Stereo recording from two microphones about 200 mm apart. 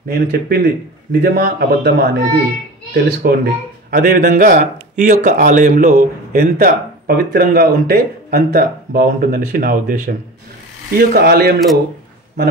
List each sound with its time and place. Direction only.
0.1 s a man's voice: 50° right (ahead or behind)